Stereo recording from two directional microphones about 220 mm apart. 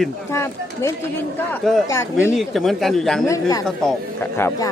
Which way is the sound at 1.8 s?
15° left (ahead or behind).